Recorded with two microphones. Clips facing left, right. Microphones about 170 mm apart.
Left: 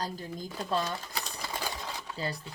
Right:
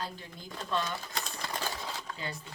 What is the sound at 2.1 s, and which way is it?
Speech, 35° left (ahead or behind).